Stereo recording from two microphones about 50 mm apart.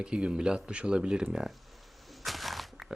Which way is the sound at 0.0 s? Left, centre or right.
Centre.